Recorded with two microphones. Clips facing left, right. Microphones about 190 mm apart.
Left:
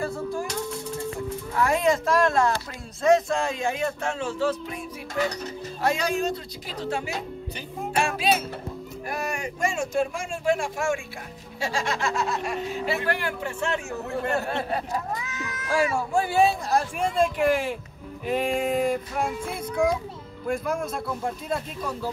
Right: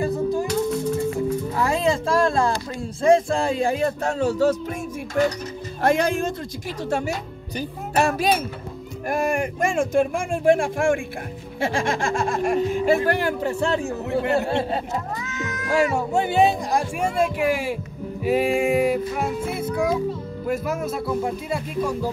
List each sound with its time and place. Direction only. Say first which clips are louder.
0.0 s music: right 6 dB; 20° right (ahead or behind)
1.6 s speech: left 1 dB; 30° right (ahead or behind)
5.8 s speech: right 5 dB; 50° right (ahead or behind); by 17.7 s 10° right (ahead or behind)
18.2 s child singing: right 5 dB; 5° right (ahead or behind)